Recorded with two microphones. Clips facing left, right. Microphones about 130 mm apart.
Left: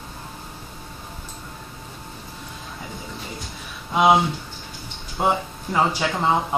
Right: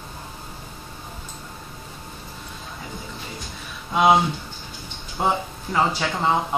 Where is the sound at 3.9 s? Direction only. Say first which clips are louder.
Even; 5° left (ahead or behind).